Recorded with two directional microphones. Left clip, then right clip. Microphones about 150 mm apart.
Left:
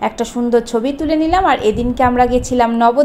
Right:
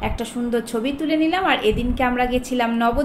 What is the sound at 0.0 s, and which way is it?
A woman's voice, 40° left (ahead or behind).